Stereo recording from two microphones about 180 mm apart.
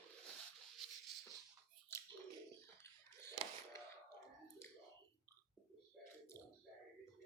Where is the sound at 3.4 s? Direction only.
35° right (ahead or behind).